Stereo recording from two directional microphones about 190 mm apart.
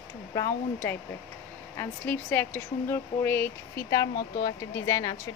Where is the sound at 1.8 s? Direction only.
10° left (ahead or behind).